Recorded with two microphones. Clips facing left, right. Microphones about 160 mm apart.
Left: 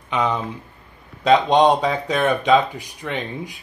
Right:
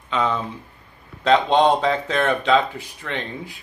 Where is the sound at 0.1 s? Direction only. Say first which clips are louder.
Left 1 dB; 15° left (ahead or behind).